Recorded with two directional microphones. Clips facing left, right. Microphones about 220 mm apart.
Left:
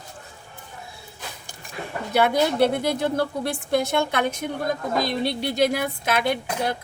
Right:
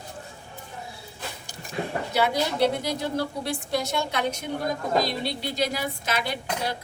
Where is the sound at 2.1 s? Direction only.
55° left (ahead or behind).